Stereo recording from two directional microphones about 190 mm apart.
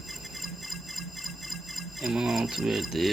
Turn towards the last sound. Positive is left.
turn(degrees=0)  # may be behind; listen again after turning